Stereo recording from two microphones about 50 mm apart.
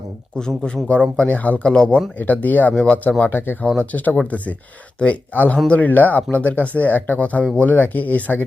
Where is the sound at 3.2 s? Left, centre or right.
Left.